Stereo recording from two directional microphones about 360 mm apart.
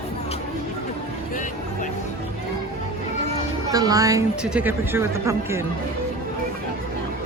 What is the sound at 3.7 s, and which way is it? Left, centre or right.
A woman's voice, centre.